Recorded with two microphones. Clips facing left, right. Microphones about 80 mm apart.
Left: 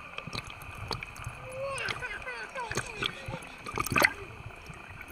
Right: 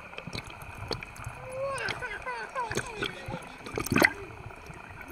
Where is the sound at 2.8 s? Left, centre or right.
Right.